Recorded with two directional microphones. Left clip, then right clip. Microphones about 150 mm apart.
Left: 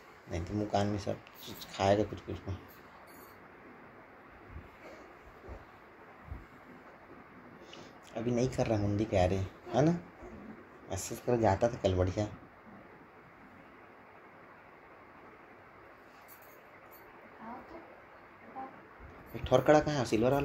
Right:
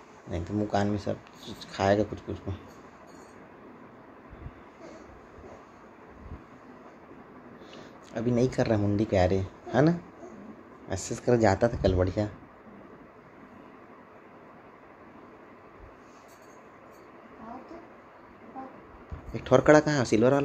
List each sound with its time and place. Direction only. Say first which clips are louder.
0.3 s speech: right 4 dB; 15° right (ahead or behind)
7.7 s speech: right 5 dB; 25° right (ahead or behind)
19.3 s speech: right 6 dB; 35° right (ahead or behind)